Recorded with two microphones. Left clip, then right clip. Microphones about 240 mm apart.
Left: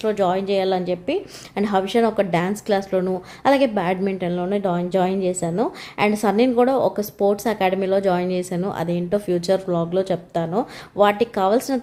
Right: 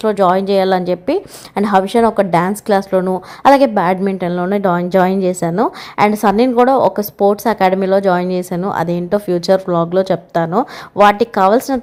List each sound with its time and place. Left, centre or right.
0.0 s a woman's voice: right